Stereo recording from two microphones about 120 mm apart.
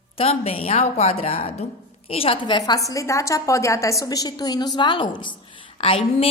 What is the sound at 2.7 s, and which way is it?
A woman's voice, 30° left (ahead or behind).